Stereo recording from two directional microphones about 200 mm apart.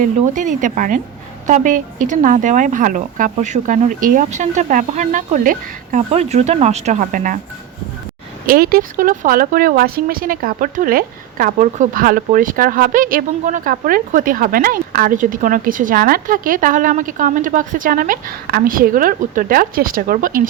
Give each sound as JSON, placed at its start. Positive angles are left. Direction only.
{"t": 0.0, "sound": "speech", "side_deg": -40}
{"t": 8.4, "sound": "speech", "side_deg": -50}